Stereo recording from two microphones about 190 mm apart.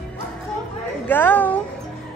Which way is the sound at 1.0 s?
10° left (ahead or behind).